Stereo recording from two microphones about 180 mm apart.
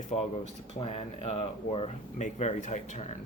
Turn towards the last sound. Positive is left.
turn(degrees=40)  # may be behind; listen again after turning